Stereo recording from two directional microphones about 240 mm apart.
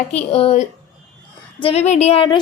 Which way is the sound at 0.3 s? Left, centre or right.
Left.